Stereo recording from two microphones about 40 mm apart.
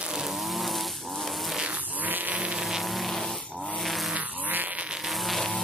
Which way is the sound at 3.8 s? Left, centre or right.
Centre.